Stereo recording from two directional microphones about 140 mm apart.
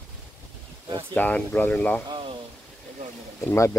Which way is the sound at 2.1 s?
35° right (ahead or behind).